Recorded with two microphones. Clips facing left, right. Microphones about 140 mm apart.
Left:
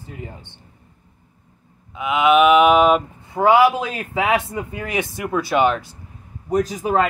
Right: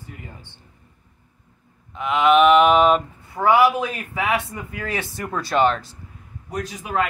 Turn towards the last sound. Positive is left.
turn(degrees=40)  # may be behind; listen again after turning